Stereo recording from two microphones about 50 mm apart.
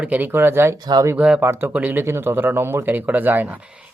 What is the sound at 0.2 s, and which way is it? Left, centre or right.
Speech, right.